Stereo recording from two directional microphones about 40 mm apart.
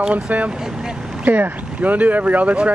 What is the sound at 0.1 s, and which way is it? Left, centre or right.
Speech, right.